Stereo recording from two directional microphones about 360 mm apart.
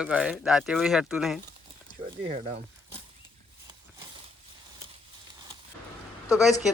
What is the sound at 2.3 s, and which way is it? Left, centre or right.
Speech, centre.